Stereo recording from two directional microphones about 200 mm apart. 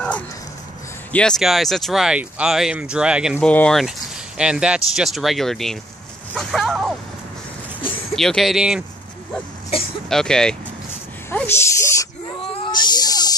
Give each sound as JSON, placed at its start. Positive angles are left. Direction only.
{"t": 1.1, "sound": "speech", "side_deg": 5}
{"t": 3.3, "sound": "speech", "side_deg": 5}
{"t": 6.3, "sound": "a sound", "side_deg": 0}
{"t": 8.2, "sound": "speech", "side_deg": 0}
{"t": 10.0, "sound": "speech", "side_deg": 5}
{"t": 11.2, "sound": "snake", "side_deg": 10}
{"t": 12.6, "sound": "a sound", "side_deg": 20}